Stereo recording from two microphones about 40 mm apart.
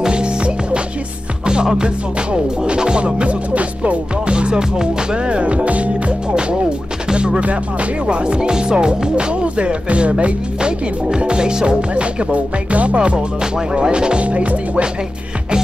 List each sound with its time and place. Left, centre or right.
0.0 s music: right
14.2 s music: right